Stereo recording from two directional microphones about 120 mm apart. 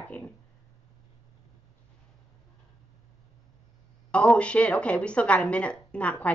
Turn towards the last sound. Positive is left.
turn(degrees=10)  # may be behind; listen again after turning